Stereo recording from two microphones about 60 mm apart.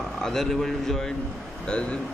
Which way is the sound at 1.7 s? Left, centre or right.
Centre.